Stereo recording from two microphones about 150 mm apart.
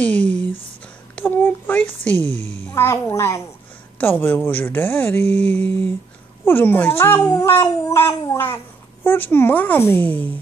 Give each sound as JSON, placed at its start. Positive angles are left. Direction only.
{"t": 0.0, "sound": "speech", "side_deg": 10}
{"t": 1.1, "sound": "child singing", "side_deg": 15}
{"t": 2.4, "sound": "a child's voice", "side_deg": 15}